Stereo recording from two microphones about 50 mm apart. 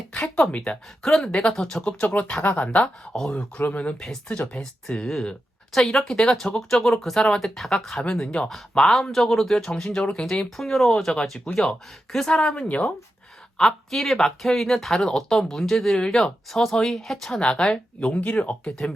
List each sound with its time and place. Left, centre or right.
0.1 s a sound: left
0.5 s speech: centre
1.8 s speech: left
4.6 s speech: centre
8.8 s speech: centre; by 12.9 s left
13.6 s speech: centre
18.1 s speech: left